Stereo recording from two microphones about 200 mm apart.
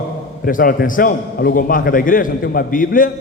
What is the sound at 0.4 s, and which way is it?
A man's voice, 45° left (ahead or behind).